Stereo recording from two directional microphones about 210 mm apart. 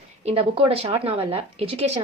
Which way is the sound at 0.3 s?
25° right (ahead or behind).